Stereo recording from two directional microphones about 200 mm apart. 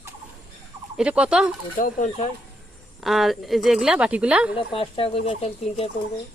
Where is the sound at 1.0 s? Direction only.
5° right (ahead or behind).